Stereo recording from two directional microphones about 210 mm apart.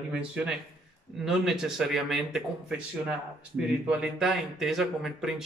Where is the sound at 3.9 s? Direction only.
5° right (ahead or behind).